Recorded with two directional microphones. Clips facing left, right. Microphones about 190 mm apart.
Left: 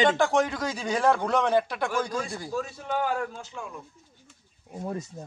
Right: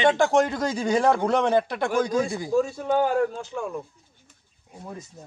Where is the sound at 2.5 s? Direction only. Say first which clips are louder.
Right 8 dB; 45° right (ahead or behind).